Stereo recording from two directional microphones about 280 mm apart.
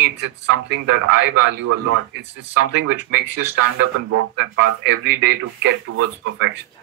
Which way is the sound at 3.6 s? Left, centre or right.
Right.